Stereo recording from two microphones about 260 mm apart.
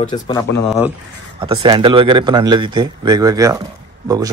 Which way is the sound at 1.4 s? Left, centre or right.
Centre.